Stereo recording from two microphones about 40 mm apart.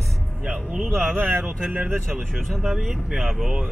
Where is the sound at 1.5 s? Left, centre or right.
Right.